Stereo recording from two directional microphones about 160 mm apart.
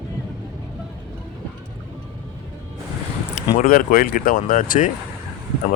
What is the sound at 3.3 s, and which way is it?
Speech, 55° left (ahead or behind).